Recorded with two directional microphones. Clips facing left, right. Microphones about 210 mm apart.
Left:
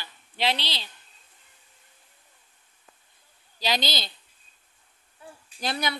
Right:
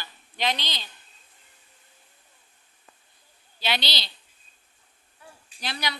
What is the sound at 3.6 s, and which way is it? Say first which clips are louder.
Speech: left 2 dB; 45° left (ahead or behind).